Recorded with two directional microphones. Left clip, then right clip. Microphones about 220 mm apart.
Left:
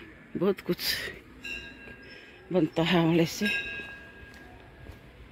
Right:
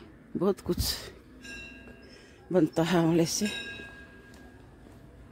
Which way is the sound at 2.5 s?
25° right (ahead or behind).